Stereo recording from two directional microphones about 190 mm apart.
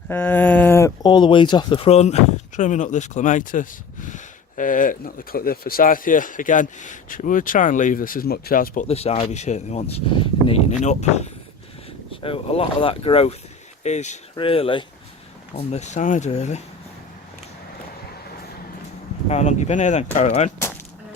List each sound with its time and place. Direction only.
0.1 s speech: 10° left (ahead or behind); by 16.6 s 35° left (ahead or behind)
19.3 s speech: 35° left (ahead or behind)